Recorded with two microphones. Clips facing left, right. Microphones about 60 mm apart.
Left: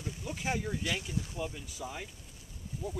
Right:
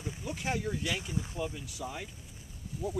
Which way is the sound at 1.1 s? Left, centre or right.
Right.